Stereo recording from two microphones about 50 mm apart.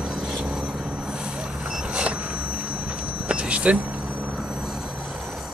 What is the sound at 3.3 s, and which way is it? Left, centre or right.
Vehicle, right.